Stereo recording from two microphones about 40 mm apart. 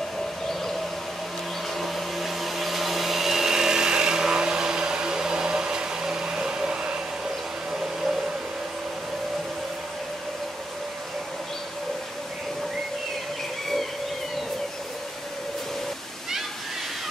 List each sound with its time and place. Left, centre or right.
1.8 s blender: centre
7.7 s hair dryer: centre